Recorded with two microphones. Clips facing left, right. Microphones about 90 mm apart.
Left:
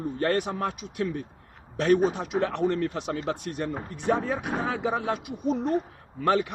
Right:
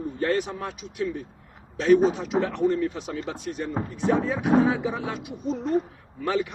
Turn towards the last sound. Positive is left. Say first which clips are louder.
# left 2 dB
turn(degrees=60)  # may be behind; listen again after turning